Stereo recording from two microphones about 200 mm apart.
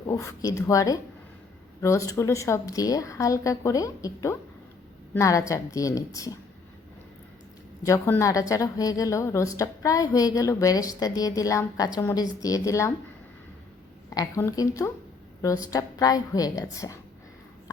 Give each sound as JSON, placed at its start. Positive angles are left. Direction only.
{"t": 0.0, "sound": "a woman's voice", "side_deg": 15}
{"t": 7.9, "sound": "a woman's voice", "side_deg": 15}
{"t": 14.1, "sound": "a woman's voice", "side_deg": 15}